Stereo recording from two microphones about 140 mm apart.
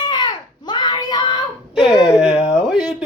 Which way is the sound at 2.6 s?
5° right (ahead or behind).